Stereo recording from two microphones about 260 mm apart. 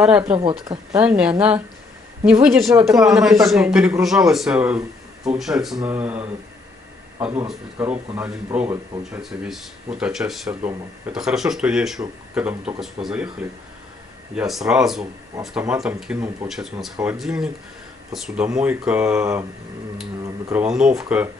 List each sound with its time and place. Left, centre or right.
0.0 s speech: centre
0.3 s a woman's voice: centre
2.9 s a woman's voice: centre
3.2 s a woman's voice: centre
20.4 s speech: centre